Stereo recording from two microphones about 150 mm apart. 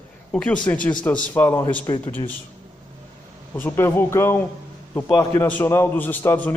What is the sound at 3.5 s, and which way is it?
A man's voice, 15° left (ahead or behind).